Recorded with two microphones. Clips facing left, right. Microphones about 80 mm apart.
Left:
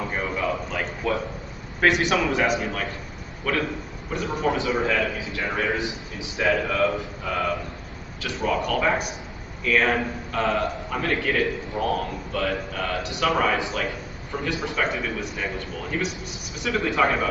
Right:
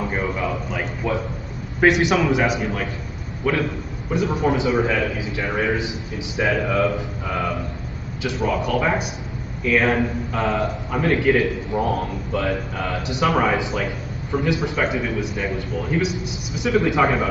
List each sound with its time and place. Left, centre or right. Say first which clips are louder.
0.1 s a sound: right 2 dB; centre
1.8 s a man's voice: right 4 dB; centre
2.4 s a man's voice: right 2 dB; centre
3.4 s a man's voice: right 4 dB; centre
8.5 s a man's voice: right 1 dB; centre
14.8 s a man's voice: right 4 dB; centre
16.6 s a man's voice: right 4 dB; centre